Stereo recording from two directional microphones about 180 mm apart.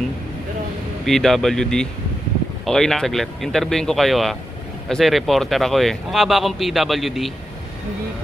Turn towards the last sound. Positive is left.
turn(degrees=0)  # may be behind; listen again after turning